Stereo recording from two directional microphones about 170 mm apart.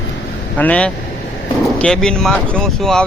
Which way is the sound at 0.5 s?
10° left (ahead or behind).